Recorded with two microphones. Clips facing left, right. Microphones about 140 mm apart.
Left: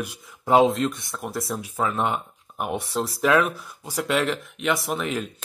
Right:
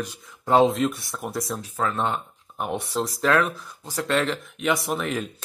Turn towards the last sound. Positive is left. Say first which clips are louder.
# even
turn(degrees=5)  # may be behind; listen again after turning